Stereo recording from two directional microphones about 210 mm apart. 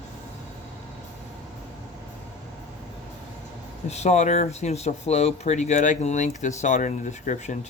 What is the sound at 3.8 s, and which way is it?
Speech, 30° left (ahead or behind).